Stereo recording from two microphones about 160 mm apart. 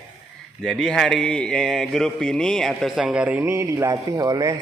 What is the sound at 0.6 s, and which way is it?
A man's voice, 5° left (ahead or behind).